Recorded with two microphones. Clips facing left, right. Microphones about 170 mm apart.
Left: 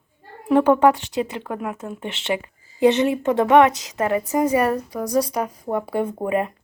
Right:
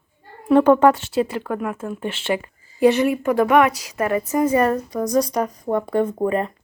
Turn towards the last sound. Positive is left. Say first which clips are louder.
# right 2 dB
turn(degrees=10)  # may be behind; listen again after turning